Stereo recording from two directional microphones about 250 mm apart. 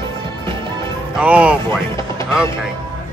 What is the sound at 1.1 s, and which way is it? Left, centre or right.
Speech, centre.